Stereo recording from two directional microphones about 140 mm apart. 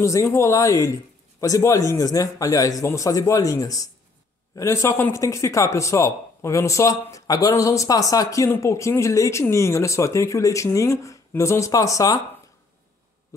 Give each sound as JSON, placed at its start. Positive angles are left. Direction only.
{"t": 0.0, "sound": "speech", "side_deg": 20}